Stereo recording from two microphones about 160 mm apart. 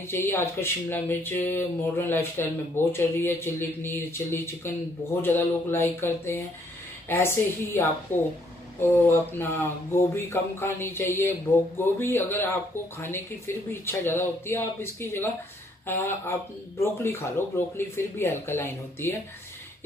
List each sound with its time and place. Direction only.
0.3 s speech: 15° left (ahead or behind)
13.7 s speech: 15° left (ahead or behind)